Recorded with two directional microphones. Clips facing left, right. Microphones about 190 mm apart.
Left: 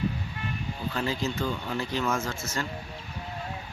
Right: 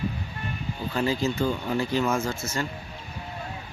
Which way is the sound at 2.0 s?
15° right (ahead or behind).